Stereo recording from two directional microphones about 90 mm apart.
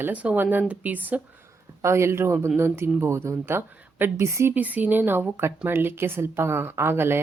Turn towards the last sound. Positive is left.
turn(degrees=-25)  # may be behind; listen again after turning